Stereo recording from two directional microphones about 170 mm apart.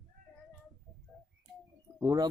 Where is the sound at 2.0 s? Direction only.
20° right (ahead or behind).